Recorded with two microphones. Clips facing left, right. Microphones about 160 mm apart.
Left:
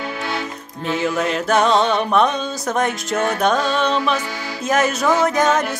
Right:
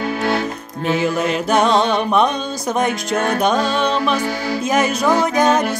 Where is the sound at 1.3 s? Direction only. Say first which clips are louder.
Even; centre (ahead or behind).